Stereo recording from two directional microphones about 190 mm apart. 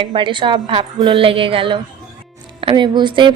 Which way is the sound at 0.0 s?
25° right (ahead or behind).